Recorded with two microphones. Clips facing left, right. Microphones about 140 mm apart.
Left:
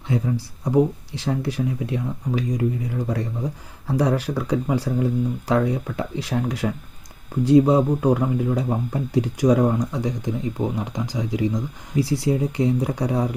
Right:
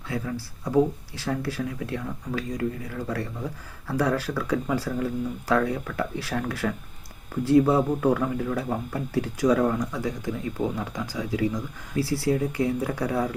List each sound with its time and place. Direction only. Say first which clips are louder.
0.1 s speech: left 6 dB; 20° left (ahead or behind)